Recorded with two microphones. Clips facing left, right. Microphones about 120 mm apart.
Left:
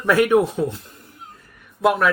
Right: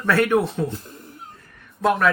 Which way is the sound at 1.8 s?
5° left (ahead or behind).